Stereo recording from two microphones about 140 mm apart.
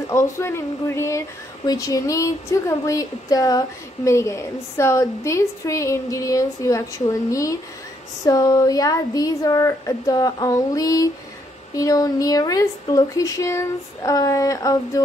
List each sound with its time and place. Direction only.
0.1 s speech: 20° left (ahead or behind)